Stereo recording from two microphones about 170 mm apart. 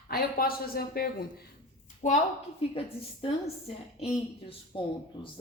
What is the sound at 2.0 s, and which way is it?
Speech, 45° left (ahead or behind).